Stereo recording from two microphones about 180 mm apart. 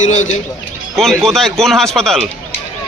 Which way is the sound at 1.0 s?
Centre (ahead or behind).